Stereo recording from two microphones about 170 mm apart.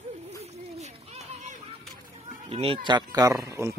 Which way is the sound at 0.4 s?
40° right (ahead or behind).